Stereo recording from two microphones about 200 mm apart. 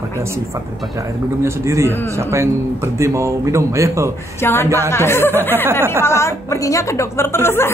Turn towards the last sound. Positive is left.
turn(degrees=10)  # may be behind; listen again after turning